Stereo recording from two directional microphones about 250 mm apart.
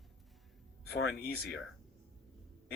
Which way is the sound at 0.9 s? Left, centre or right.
Left.